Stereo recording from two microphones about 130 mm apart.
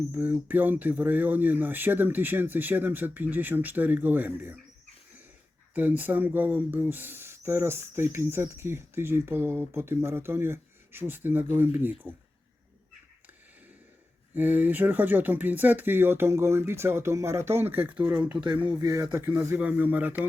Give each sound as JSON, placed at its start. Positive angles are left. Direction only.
{"t": 0.1, "sound": "speech", "side_deg": -15}
{"t": 5.7, "sound": "speech", "side_deg": -15}
{"t": 14.3, "sound": "speech", "side_deg": -15}
{"t": 18.3, "sound": "speech", "side_deg": -40}